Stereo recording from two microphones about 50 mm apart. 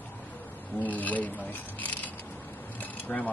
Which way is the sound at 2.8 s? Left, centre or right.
Left.